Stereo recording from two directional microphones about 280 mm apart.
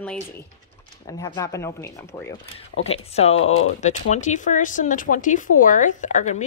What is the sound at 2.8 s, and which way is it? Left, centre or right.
Speech, left.